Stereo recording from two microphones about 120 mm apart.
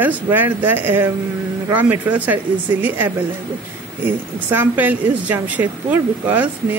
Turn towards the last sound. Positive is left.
turn(degrees=-15)  # may be behind; listen again after turning